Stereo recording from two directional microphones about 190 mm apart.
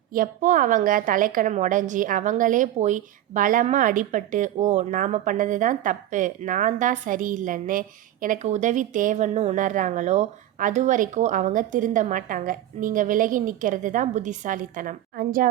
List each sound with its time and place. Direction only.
0.1 s a woman's voice: 45° right (ahead or behind)